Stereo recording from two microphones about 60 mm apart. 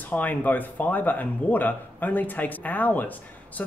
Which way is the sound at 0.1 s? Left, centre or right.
Left.